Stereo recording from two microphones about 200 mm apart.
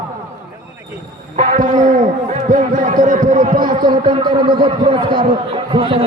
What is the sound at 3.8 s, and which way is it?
A man's voice, 20° right (ahead or behind).